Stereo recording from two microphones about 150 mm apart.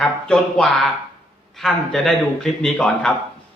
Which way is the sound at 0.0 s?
5° left (ahead or behind).